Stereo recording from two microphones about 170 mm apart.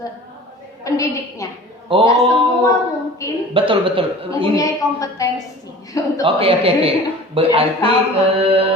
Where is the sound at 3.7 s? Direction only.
30° right (ahead or behind).